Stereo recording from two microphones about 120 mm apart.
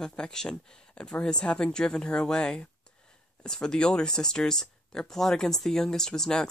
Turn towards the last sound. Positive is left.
turn(degrees=5)  # may be behind; listen again after turning